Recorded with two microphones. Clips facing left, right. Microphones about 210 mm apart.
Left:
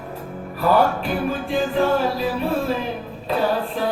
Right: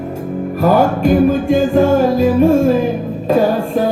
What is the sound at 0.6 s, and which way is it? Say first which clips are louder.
Music: right 6 dB; 45° right (ahead or behind).